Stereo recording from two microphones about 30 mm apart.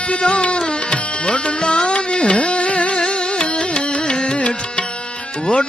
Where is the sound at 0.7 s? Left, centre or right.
Left.